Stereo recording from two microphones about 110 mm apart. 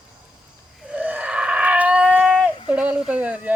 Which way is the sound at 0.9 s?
10° right (ahead or behind).